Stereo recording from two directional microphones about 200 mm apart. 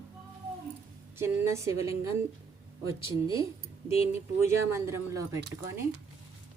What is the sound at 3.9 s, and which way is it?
Speech, 30° left (ahead or behind).